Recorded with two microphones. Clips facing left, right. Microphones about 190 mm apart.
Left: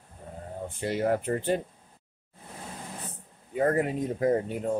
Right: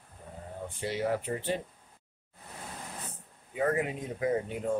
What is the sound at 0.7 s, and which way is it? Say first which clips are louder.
Speech: left 4 dB; 50° left (ahead or behind).